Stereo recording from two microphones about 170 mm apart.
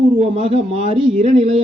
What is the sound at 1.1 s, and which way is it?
Speech, 40° right (ahead or behind).